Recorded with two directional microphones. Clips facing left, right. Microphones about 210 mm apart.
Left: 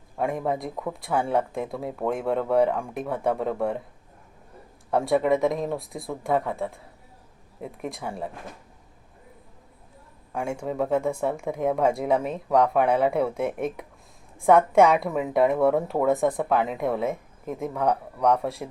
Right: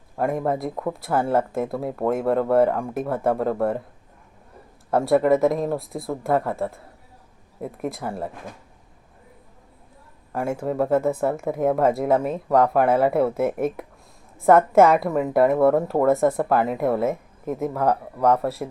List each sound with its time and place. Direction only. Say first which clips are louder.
0.2 s a woman's voice: right 3 dB; centre (ahead or behind)
4.9 s a woman's voice: right 4 dB; centre (ahead or behind)
10.3 s a woman's voice: right 4 dB; 5° right (ahead or behind)